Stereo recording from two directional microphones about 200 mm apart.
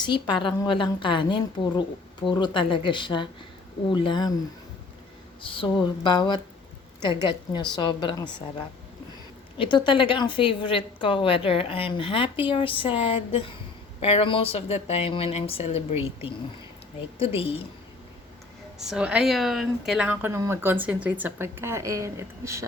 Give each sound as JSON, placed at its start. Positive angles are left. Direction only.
{"t": 0.4, "sound": "a woman's voice", "side_deg": 25}
{"t": 5.4, "sound": "a woman's voice", "side_deg": 25}
{"t": 9.6, "sound": "a woman's voice", "side_deg": 25}
{"t": 17.2, "sound": "a woman's voice", "side_deg": 30}
{"t": 18.9, "sound": "speech", "side_deg": -5}